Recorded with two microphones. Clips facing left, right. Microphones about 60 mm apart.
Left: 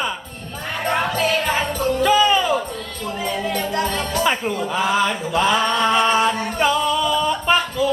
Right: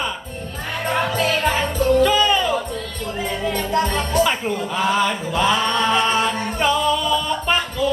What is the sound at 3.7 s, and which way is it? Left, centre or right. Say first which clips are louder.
Music: right 2 dB; right.